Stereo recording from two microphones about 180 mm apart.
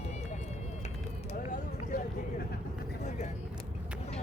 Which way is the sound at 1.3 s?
45° left (ahead or behind).